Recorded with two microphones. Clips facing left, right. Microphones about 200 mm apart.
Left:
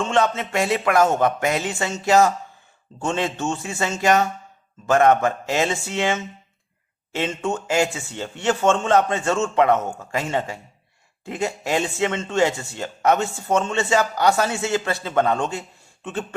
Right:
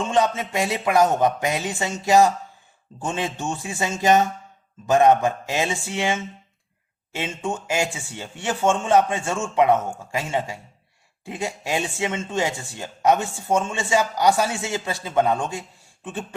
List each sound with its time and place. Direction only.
0.1 s speech: 15° right (ahead or behind)